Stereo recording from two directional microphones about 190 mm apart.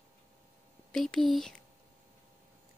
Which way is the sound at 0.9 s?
Centre (ahead or behind).